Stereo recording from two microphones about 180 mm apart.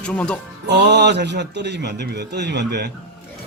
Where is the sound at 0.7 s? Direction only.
70° right (ahead or behind).